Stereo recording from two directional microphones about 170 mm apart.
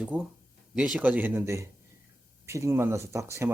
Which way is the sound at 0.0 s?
5° right (ahead or behind).